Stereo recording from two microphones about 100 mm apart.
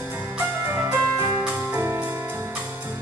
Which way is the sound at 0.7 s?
25° right (ahead or behind).